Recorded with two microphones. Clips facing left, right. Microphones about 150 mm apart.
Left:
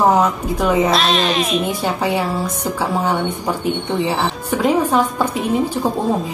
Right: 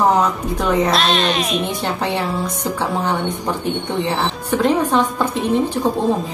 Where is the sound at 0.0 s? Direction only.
Centre (ahead or behind).